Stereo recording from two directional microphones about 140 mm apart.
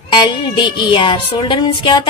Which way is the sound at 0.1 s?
35° left (ahead or behind).